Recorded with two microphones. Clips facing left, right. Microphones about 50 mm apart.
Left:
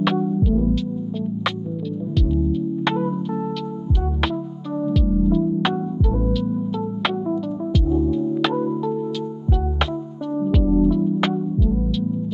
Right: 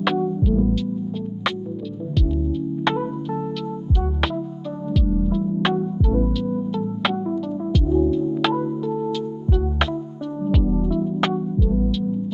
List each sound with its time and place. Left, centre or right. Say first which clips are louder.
0.0 s music: left 1 dB; centre
2.8 s music: right 1 dB; centre
4.8 s music: left 3 dB; centre
10.4 s music: left 4 dB; centre